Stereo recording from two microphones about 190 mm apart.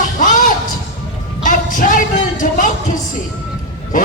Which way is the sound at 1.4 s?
45° left (ahead or behind).